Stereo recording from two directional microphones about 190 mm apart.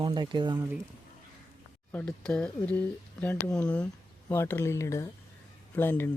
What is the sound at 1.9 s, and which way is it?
Speech, 10° left (ahead or behind).